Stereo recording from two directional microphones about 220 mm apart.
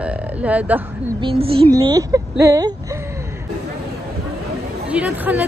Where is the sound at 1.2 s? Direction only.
25° right (ahead or behind).